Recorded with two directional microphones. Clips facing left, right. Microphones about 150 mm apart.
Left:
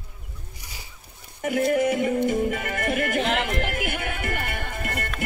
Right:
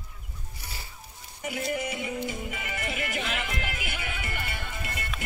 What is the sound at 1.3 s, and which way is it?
Music, 55° left (ahead or behind).